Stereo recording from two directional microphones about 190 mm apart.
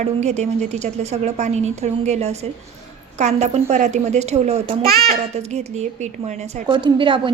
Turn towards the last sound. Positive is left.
turn(degrees=-25)  # may be behind; listen again after turning